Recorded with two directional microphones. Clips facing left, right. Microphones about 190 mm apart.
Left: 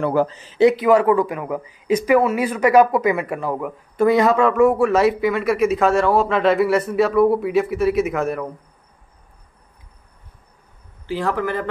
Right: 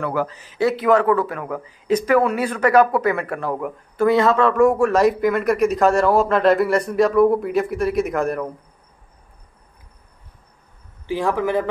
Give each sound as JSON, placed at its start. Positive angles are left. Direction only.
{"t": 0.0, "sound": "a man's voice", "side_deg": 30}
{"t": 0.7, "sound": "speech", "side_deg": 10}
{"t": 3.9, "sound": "speech", "side_deg": 20}
{"t": 11.1, "sound": "a man's voice", "side_deg": -15}